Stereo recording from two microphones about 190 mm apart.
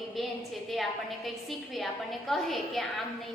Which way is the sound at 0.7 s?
Centre (ahead or behind).